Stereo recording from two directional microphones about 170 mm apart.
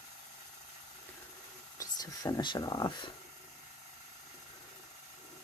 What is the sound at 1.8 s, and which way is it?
Speech, 20° left (ahead or behind).